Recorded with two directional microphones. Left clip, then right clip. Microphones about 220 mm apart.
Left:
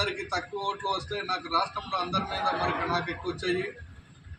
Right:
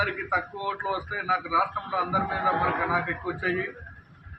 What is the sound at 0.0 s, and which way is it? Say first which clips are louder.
A man's voice: right 4 dB; 10° left (ahead or behind).